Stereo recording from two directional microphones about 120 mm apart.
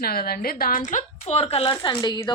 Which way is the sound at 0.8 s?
90° left.